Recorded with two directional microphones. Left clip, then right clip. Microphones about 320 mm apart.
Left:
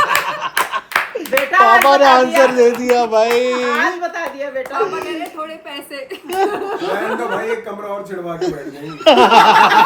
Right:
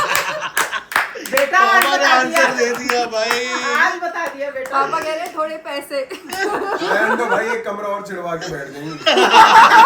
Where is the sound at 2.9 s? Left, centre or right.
Left.